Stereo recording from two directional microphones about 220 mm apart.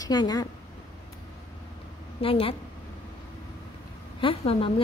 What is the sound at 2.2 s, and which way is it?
Speech, 25° left (ahead or behind).